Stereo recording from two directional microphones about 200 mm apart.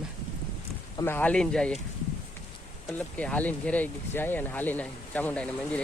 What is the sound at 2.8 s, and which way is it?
Speech, 5° left (ahead or behind).